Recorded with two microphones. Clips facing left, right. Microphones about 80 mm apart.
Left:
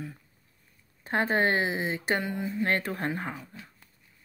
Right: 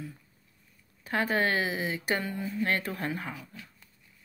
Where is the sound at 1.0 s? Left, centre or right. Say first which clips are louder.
Left 2 dB; left.